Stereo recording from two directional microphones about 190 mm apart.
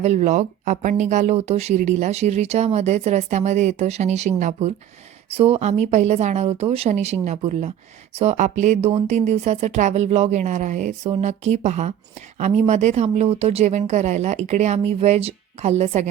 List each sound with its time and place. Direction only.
0.0 s speech: 35° right (ahead or behind)